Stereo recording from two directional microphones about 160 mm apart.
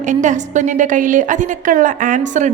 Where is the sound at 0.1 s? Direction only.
50° right (ahead or behind).